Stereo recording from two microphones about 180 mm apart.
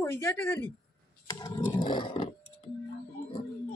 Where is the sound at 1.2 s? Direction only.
20° left (ahead or behind).